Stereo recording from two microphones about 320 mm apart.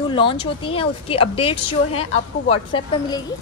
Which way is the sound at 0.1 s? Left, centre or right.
Centre.